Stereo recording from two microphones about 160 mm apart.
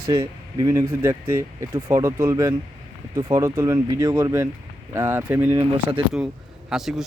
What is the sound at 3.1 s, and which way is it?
Speech, 30° right (ahead or behind).